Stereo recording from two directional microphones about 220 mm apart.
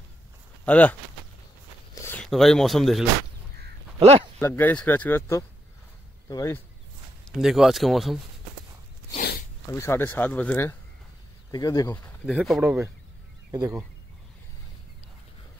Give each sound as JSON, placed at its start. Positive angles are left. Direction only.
{"t": 0.7, "sound": "speech", "side_deg": 5}
{"t": 2.0, "sound": "speech", "side_deg": 10}
{"t": 4.4, "sound": "speech", "side_deg": 10}
{"t": 7.2, "sound": "speech", "side_deg": 0}
{"t": 9.7, "sound": "speech", "side_deg": 10}
{"t": 12.3, "sound": "speech", "side_deg": 0}
{"t": 13.5, "sound": "speech", "side_deg": -15}